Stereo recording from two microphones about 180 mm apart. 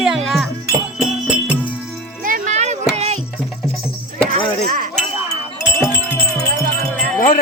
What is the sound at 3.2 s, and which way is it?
Music, centre (ahead or behind).